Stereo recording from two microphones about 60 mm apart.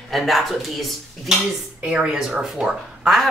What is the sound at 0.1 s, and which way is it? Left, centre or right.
Speech, centre.